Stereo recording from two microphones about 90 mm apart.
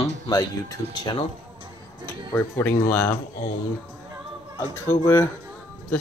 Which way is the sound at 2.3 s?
20° left (ahead or behind).